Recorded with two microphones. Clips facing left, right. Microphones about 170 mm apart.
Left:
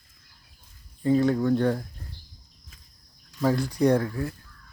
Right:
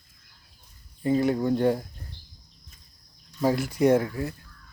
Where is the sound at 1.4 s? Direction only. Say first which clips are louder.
Even; 20° right (ahead or behind).